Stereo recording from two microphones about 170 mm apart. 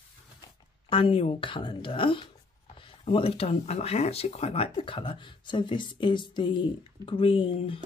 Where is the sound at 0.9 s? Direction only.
30° left (ahead or behind).